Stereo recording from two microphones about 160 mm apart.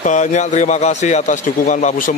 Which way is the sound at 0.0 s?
50° left (ahead or behind).